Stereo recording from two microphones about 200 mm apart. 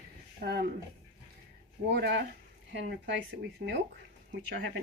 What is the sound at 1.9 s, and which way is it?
Speech, 60° right (ahead or behind).